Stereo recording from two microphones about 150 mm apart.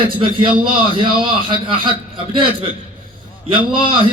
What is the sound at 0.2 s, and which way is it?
A man's voice, 35° right (ahead or behind).